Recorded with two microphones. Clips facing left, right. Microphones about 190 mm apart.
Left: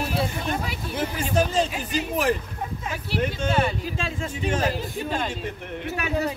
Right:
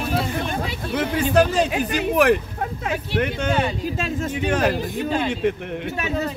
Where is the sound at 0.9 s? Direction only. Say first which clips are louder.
Right 6 dB; 70° right (ahead or behind).